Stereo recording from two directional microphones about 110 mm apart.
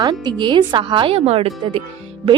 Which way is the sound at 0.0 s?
45° right (ahead or behind).